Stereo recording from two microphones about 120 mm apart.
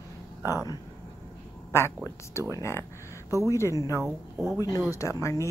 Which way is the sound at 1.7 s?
20° left (ahead or behind).